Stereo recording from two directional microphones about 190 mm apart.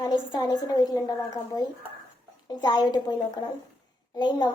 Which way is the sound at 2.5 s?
20° left (ahead or behind).